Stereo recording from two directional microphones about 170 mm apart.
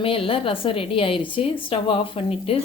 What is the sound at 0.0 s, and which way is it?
A woman's voice, 30° left (ahead or behind).